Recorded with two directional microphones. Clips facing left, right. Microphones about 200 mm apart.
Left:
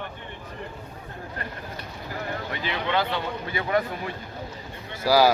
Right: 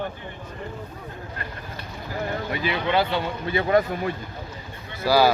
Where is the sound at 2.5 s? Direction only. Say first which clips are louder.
Right 3 dB; 10° right (ahead or behind).